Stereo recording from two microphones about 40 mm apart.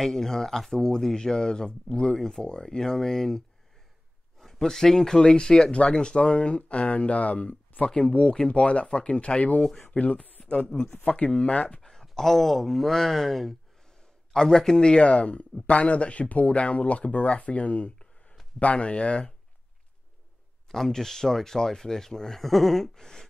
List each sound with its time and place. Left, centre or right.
0.0 s speech: centre; by 7.9 s left
7.9 s speech: left
11.8 s a sound: centre
12.1 s speech: centre
14.8 s speech: left
20.6 s speech: centre
22.9 s speech: centre